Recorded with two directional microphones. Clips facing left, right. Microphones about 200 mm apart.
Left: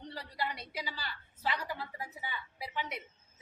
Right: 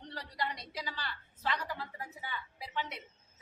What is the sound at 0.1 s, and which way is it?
A woman's voice, 10° left (ahead or behind).